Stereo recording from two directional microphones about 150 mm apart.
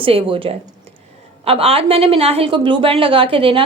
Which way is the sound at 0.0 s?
40° right (ahead or behind).